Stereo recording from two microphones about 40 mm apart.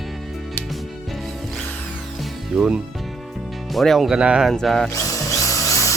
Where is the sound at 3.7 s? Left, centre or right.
Centre.